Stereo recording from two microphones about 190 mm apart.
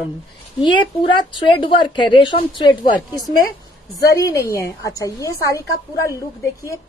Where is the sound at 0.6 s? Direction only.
25° left (ahead or behind).